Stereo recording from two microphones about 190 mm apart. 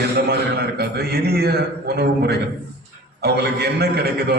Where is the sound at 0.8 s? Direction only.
55° right (ahead or behind).